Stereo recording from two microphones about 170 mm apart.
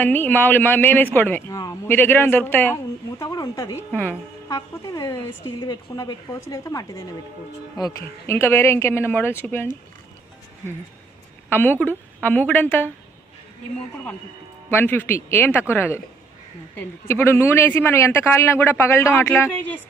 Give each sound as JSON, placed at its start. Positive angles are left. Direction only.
{"t": 0.0, "sound": "a woman's voice", "side_deg": 10}
{"t": 11.4, "sound": "a woman's voice", "side_deg": 10}
{"t": 14.7, "sound": "a woman's voice", "side_deg": 10}
{"t": 17.1, "sound": "a woman's voice", "side_deg": 15}